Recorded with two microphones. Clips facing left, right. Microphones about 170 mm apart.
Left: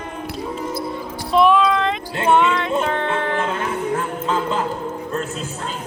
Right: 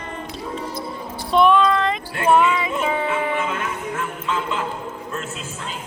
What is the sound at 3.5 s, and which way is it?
Music, 35° left (ahead or behind).